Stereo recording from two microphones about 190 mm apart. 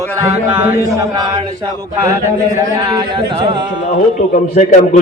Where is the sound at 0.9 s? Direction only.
20° right (ahead or behind).